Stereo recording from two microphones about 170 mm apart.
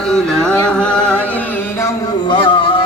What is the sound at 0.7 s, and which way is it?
Chant, 5° left (ahead or behind).